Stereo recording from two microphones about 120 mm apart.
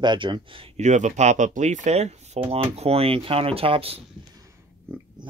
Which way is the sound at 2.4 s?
55° right (ahead or behind).